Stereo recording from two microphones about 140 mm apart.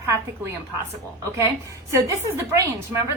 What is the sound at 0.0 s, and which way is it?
Speech, 20° right (ahead or behind).